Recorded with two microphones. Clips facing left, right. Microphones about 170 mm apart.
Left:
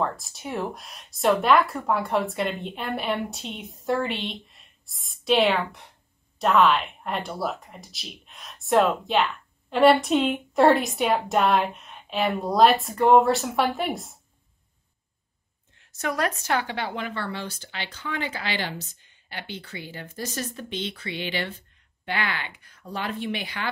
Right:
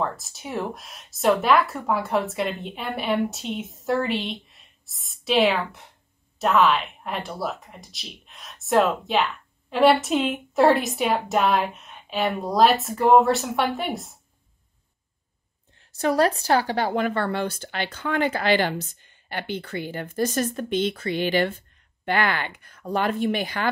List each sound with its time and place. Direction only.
0.0 s speech: centre (ahead or behind)
15.9 s speech: 30° right (ahead or behind)